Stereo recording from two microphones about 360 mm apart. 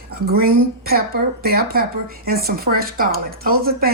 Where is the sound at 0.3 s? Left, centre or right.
Right.